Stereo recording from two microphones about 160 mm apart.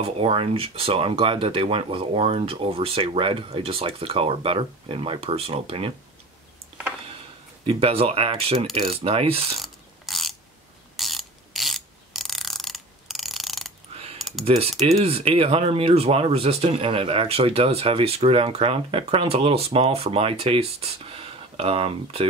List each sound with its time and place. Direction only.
0.0 s speech: 35° right (ahead or behind)
7.6 s speech: 35° right (ahead or behind)
9.6 s ratchet: centre (ahead or behind)
14.4 s speech: 40° right (ahead or behind)